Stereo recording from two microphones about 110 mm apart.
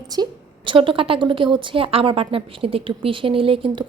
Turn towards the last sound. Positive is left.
turn(degrees=-50)  # may be behind; listen again after turning